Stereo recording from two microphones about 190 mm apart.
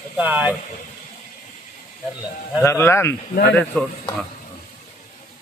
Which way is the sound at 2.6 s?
15° left (ahead or behind).